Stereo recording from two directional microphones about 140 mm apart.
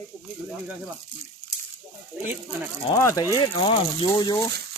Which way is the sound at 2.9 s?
25° left (ahead or behind).